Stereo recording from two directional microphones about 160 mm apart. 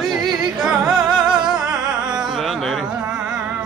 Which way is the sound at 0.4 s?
5° right (ahead or behind).